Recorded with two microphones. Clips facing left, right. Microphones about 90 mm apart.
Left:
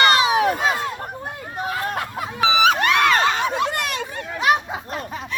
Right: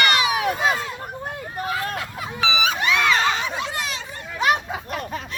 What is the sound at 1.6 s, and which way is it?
Speech, 20° left (ahead or behind).